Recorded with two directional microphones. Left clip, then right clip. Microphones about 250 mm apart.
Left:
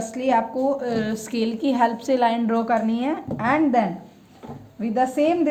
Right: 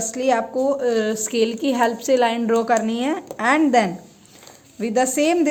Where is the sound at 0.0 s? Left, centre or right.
Centre.